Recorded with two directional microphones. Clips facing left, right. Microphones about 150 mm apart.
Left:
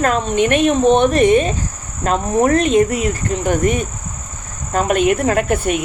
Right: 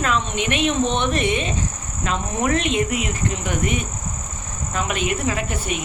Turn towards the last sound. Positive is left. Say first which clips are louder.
# left 9 dB
turn(degrees=55)  # may be behind; listen again after turning